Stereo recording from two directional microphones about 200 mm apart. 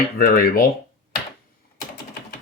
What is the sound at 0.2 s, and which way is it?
Speech, 45° left (ahead or behind).